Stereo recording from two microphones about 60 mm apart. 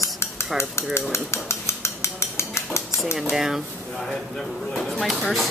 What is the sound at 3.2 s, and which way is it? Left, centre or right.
Speech, centre.